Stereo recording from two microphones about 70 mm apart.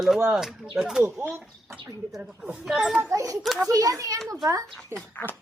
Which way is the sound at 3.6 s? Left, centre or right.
Right.